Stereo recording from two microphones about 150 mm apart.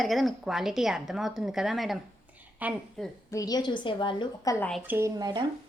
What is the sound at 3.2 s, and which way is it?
A woman's voice, 25° left (ahead or behind).